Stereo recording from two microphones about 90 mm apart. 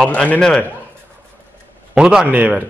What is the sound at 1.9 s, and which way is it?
Speech, 10° right (ahead or behind).